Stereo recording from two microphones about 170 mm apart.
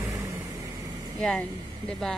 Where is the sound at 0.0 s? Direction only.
20° right (ahead or behind).